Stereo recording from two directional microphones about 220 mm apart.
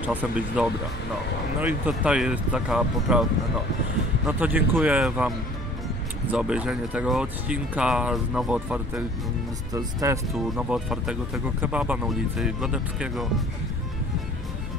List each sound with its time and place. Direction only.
0.0 s speech: 10° right (ahead or behind)
4.3 s speech: 10° right (ahead or behind)
6.3 s speech: 5° right (ahead or behind)
9.8 s speech: 15° right (ahead or behind)
10.3 s speech: centre (ahead or behind)